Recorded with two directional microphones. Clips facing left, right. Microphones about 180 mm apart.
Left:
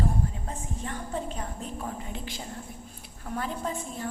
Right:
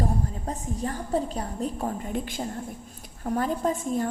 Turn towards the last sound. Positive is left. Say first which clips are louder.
# right 7 dB
turn(degrees=-45)  # may be behind; listen again after turning